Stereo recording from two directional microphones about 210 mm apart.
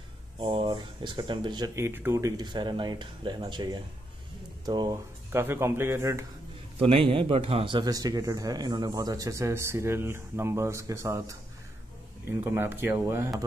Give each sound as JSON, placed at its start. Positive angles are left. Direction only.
{"t": 0.4, "sound": "speech", "side_deg": -25}
{"t": 6.8, "sound": "speech", "side_deg": -25}
{"t": 12.4, "sound": "speech", "side_deg": -10}